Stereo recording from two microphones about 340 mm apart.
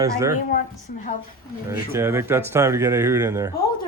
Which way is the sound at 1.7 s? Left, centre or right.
Centre.